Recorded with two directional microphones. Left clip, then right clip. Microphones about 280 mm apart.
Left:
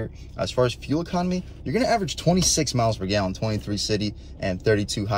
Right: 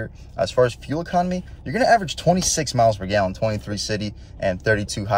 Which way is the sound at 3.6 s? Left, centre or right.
Right.